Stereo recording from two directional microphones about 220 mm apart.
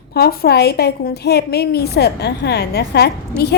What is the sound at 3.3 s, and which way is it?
Speech, 10° right (ahead or behind).